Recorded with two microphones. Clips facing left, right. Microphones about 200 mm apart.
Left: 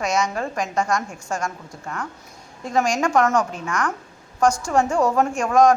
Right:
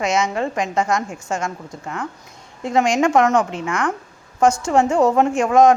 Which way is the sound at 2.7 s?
25° right (ahead or behind).